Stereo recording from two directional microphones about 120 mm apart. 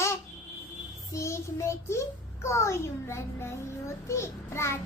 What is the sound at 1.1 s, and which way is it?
A child's voice, 25° left (ahead or behind).